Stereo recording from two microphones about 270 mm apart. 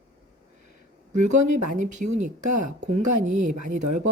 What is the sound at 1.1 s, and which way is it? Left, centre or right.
A woman's voice, right.